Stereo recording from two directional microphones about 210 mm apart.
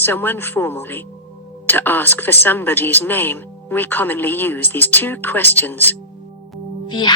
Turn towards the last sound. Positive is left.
turn(degrees=20)  # may be behind; listen again after turning